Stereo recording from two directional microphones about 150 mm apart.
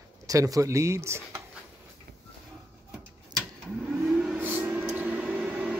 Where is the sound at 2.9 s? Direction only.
10° right (ahead or behind).